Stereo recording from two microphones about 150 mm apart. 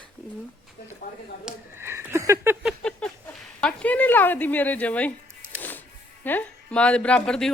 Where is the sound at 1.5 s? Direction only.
5° right (ahead or behind).